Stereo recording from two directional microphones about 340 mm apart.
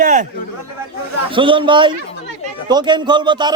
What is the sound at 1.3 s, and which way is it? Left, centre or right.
A man's voice, centre.